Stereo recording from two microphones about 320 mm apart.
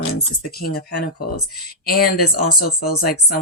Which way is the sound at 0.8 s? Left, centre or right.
Left.